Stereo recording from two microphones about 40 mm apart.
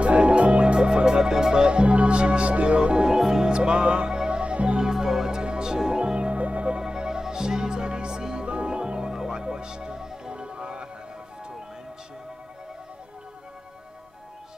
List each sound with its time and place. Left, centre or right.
0.0 s music: right
3.2 s music: centre
3.5 s music: right
6.8 s music: centre